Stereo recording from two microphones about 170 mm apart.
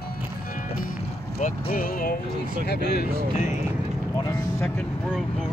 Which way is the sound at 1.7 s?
55° left (ahead or behind).